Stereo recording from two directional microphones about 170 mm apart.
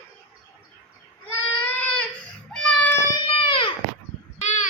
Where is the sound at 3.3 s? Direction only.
30° left (ahead or behind).